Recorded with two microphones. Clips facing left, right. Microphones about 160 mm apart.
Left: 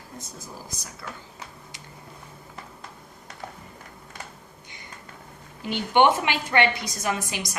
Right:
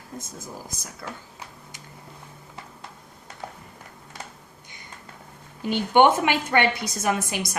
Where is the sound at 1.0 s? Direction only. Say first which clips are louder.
Right 3 dB; 35° right (ahead or behind).